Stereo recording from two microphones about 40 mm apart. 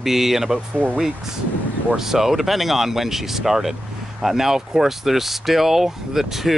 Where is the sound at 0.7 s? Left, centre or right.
Right.